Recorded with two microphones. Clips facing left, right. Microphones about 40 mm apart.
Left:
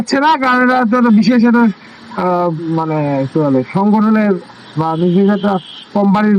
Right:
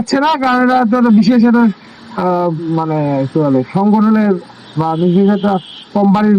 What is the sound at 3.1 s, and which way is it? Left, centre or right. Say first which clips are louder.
A man's voice: even; centre.